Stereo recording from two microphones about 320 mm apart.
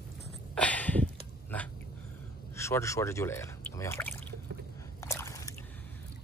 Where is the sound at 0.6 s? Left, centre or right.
Centre.